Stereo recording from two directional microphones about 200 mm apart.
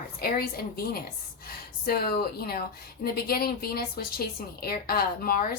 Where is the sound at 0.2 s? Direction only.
50° left (ahead or behind).